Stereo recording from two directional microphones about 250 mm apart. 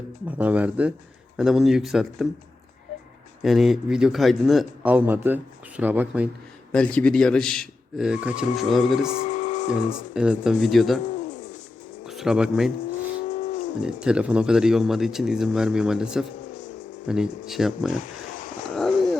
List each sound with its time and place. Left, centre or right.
0.3 s speech: centre
3.4 s speech: centre
6.7 s speech: centre
9.0 s speech: left
10.2 s speech: centre
11.0 s bird: left
12.0 s speech: centre
13.2 s wild animals: left
13.8 s speech: centre
18.0 s wild animals: left
18.7 s a sound: centre